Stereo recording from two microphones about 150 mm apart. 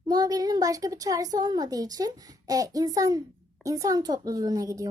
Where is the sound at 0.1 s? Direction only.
25° right (ahead or behind).